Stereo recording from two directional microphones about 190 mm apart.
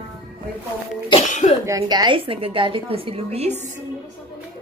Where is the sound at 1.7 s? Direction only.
20° right (ahead or behind).